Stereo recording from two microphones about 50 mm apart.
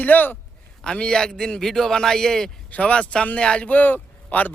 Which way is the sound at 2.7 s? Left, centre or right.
Left.